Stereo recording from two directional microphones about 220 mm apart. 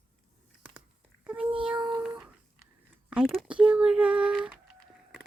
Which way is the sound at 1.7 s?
20° right (ahead or behind).